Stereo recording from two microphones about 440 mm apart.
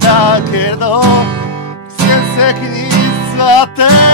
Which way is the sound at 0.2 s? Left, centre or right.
Left.